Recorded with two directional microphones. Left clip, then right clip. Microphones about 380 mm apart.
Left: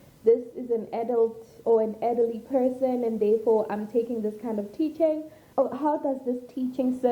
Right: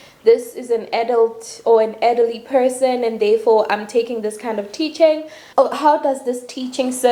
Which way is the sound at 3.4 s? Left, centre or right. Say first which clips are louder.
Right 9 dB; centre.